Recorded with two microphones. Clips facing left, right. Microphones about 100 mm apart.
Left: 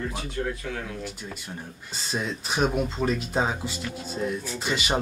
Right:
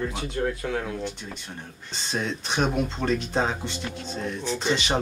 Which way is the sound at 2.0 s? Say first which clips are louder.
Right 1 dB; 5° left (ahead or behind).